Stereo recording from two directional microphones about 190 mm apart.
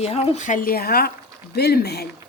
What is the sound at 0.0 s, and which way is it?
Speech, 35° left (ahead or behind).